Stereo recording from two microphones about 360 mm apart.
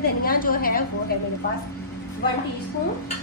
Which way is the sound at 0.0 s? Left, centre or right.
Left.